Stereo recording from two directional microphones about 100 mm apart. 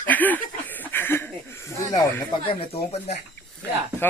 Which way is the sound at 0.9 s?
20° left (ahead or behind).